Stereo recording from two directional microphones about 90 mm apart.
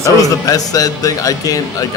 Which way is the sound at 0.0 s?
40° left (ahead or behind).